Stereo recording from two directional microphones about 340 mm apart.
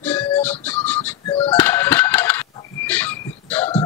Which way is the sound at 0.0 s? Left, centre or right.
Centre.